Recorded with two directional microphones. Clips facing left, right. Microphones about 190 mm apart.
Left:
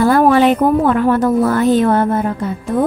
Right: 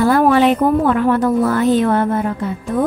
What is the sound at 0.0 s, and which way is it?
A woman's voice, 40° left (ahead or behind).